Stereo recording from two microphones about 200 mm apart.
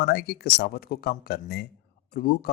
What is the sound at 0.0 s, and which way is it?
A man's voice, 50° left (ahead or behind).